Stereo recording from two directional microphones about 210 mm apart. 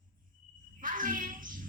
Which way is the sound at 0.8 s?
40° right (ahead or behind).